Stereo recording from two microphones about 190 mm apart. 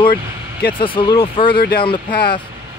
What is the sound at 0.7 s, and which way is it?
Speech, 25° left (ahead or behind).